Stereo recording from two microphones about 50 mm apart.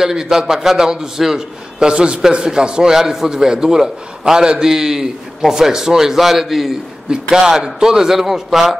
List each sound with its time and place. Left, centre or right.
0.0 s a man's voice: centre
7.1 s a man's voice: centre